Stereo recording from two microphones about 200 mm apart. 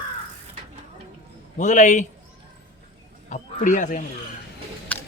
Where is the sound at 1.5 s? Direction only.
40° left (ahead or behind).